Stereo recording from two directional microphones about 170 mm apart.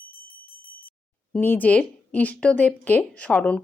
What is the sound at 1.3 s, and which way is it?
A woman's voice, 10° left (ahead or behind).